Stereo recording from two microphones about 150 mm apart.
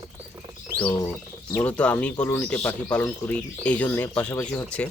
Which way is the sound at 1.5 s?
10° left (ahead or behind).